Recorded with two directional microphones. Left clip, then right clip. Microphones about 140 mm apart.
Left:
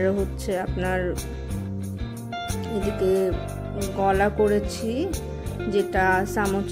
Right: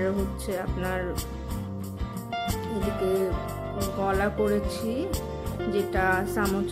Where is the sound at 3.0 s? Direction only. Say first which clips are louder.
Left 5 dB; 15° left (ahead or behind).